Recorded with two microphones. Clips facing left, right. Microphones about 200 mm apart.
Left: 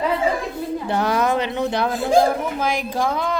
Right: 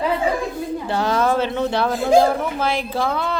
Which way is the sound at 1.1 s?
15° left (ahead or behind).